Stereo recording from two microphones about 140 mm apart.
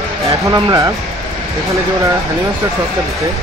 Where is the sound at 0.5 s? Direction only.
30° right (ahead or behind).